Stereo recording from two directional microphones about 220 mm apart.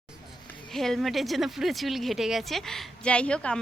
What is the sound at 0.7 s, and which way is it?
A woman's voice, centre (ahead or behind).